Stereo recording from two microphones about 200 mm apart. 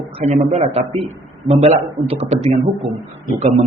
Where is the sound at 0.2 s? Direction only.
30° right (ahead or behind).